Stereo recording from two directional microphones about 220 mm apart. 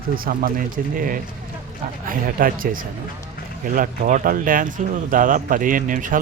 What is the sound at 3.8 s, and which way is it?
Speech, 35° right (ahead or behind).